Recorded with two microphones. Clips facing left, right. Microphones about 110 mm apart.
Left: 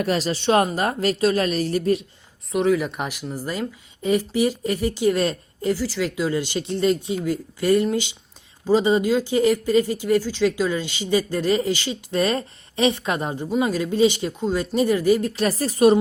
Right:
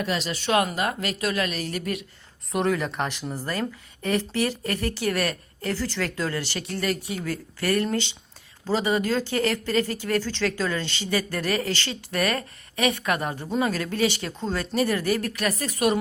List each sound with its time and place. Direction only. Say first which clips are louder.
0.0 s a woman's voice: left 5 dB; 40° left (ahead or behind)
0.3 s a woman's voice: left 3 dB; 30° left (ahead or behind)
2.5 s speech: left 4 dB; centre (ahead or behind); by 5.7 s 20° left (ahead or behind)
5.7 s speech: left 1 dB; 10° left (ahead or behind)
15.3 s a woman's voice: left 5 dB; 30° left (ahead or behind)